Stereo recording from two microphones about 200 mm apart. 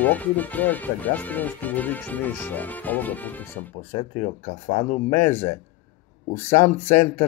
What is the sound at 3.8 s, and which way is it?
Speech, 35° left (ahead or behind).